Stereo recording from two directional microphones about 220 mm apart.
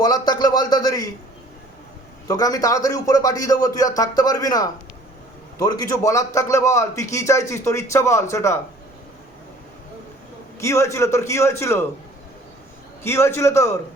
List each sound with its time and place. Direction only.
0.0 s a man's voice: 15° left (ahead or behind)
2.2 s a man's voice: 15° left (ahead or behind)
10.6 s a man's voice: 15° left (ahead or behind)
13.0 s a man's voice: 10° left (ahead or behind)